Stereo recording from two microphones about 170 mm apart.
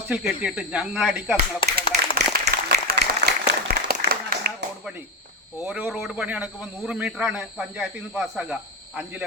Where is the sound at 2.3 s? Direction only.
60° right (ahead or behind).